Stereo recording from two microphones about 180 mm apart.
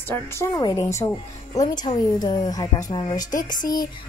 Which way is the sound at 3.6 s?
50° left (ahead or behind).